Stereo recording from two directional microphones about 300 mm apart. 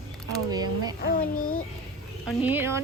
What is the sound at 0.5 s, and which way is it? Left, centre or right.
Speech, centre.